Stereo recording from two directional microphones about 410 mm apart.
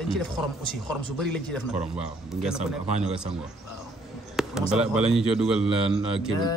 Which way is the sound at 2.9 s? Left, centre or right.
Centre.